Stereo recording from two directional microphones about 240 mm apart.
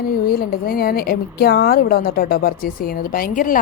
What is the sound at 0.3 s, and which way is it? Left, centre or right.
A woman's voice, left.